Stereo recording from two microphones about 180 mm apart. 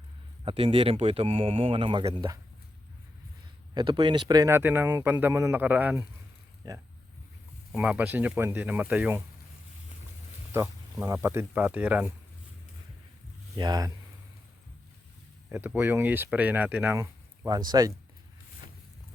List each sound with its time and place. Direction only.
0.4 s speech: 30° right (ahead or behind)
3.8 s speech: 25° right (ahead or behind); by 6.1 s 10° right (ahead or behind)
6.6 s speech: 20° right (ahead or behind)
7.7 s speech: 5° right (ahead or behind)
10.5 s speech: 15° right (ahead or behind)
13.6 s speech: 20° right (ahead or behind)
15.4 s speech: 10° right (ahead or behind)